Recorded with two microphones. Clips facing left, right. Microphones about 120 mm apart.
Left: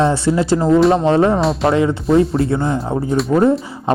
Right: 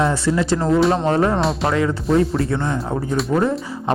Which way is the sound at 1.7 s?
25° left (ahead or behind).